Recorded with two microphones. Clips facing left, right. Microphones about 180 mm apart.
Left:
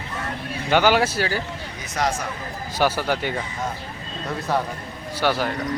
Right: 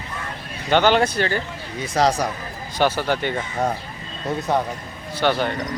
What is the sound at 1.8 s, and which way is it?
Speech, 30° right (ahead or behind).